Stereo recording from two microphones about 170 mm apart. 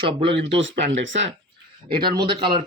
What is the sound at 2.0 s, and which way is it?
Speech, 65° right (ahead or behind).